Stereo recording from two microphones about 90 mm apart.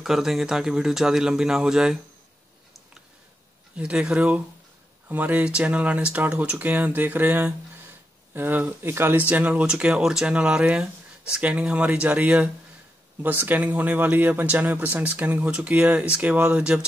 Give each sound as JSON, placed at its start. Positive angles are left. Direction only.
{"t": 0.0, "sound": "speech", "side_deg": -5}
{"t": 3.7, "sound": "speech", "side_deg": -15}